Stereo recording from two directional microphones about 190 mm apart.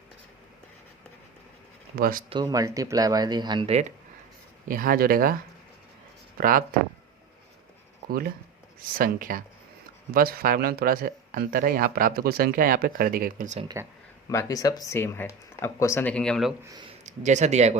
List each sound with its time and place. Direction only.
2.0 s speech: 50° right (ahead or behind)
2.3 s speech: 20° right (ahead or behind); by 3.9 s 35° right (ahead or behind)
4.7 s speech: 50° right (ahead or behind)
6.3 s speech: 50° right (ahead or behind)
8.0 s speech: 50° right (ahead or behind)
14.3 s speech: 15° left (ahead or behind)
16.9 s speech: 40° right (ahead or behind)